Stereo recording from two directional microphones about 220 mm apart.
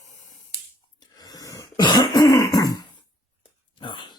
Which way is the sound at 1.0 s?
15° left (ahead or behind).